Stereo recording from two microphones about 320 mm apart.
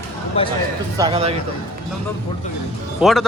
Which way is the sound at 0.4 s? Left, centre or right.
Centre.